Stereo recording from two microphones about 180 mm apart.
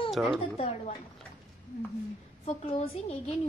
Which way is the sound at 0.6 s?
35° left (ahead or behind).